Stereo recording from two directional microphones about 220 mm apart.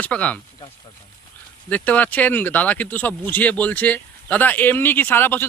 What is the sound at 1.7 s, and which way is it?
Speech, 5° left (ahead or behind).